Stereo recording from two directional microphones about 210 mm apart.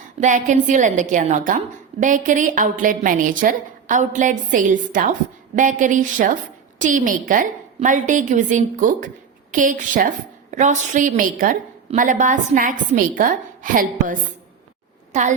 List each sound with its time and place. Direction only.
0.2 s a woman's voice: 35° right (ahead or behind)